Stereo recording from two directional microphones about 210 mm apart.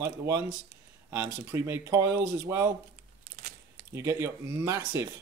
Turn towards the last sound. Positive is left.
turn(degrees=-15)  # may be behind; listen again after turning